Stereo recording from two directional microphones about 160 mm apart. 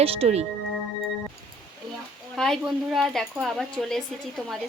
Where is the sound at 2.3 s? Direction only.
Centre (ahead or behind).